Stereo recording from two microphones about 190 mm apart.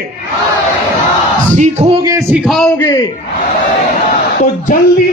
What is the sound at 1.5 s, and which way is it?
Speech, 40° right (ahead or behind).